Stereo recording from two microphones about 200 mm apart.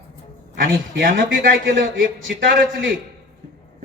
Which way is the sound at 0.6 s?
45° right (ahead or behind).